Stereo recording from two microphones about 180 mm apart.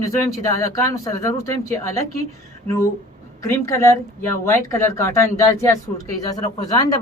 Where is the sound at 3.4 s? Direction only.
15° left (ahead or behind).